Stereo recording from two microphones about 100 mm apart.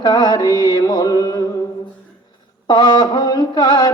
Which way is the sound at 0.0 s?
45° left (ahead or behind).